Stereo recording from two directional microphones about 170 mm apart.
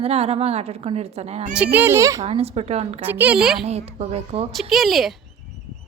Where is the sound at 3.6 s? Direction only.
35° right (ahead or behind).